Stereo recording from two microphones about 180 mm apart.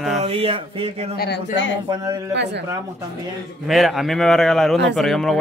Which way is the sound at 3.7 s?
Centre (ahead or behind).